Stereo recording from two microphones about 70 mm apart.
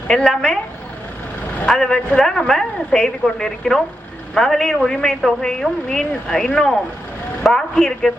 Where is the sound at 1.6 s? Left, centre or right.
Centre.